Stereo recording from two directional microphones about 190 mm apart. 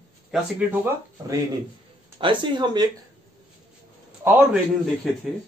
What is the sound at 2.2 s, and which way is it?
Speech, 25° right (ahead or behind).